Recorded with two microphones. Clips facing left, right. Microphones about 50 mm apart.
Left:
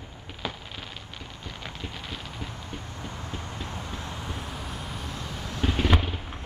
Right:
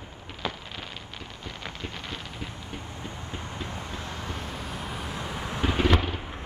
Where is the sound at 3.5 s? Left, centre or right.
Right.